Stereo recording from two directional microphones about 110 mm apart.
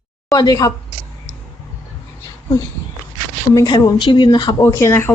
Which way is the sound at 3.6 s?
35° left (ahead or behind).